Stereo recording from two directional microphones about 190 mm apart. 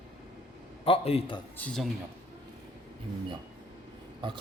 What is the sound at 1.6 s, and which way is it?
Speech, 5° left (ahead or behind).